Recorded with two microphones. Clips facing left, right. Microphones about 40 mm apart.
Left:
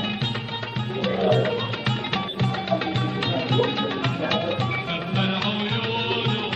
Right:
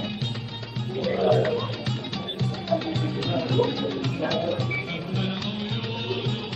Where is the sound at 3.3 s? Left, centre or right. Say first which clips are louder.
Even; left.